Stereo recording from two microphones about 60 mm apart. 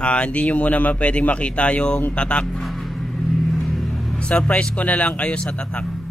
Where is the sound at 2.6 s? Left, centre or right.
Centre.